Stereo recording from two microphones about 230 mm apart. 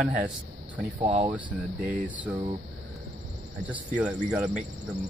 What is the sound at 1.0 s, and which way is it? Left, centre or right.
Speech, right.